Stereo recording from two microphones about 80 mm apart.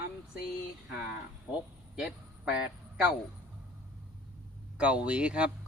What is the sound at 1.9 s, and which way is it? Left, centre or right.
Speech, centre.